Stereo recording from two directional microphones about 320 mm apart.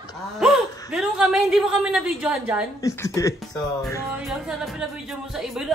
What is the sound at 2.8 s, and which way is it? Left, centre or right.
Speech, centre.